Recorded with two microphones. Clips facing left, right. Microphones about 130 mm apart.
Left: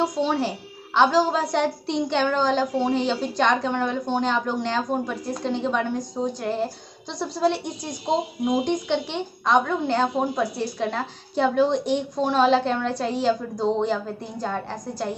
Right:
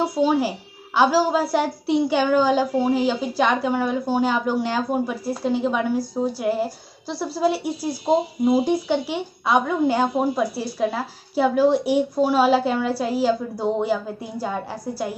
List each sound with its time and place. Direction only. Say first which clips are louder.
0.0 s a woman's voice: right 3 dB; 5° right (ahead or behind)